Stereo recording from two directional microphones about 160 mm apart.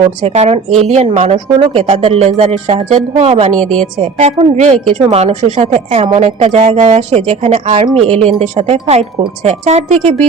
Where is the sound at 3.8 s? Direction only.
40° right (ahead or behind).